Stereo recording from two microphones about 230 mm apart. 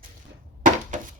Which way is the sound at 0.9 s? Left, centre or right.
Right.